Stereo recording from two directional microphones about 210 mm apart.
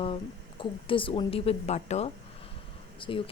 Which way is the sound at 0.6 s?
25° left (ahead or behind).